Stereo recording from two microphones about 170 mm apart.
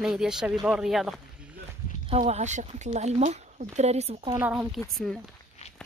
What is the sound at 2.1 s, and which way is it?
Speech, 40° right (ahead or behind).